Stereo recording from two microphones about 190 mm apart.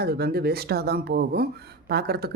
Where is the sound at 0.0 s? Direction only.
55° right (ahead or behind).